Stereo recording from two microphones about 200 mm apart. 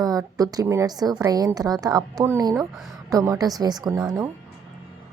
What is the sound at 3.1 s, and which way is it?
A woman's voice, 15° right (ahead or behind).